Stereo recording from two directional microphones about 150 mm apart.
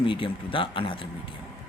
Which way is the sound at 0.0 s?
35° left (ahead or behind).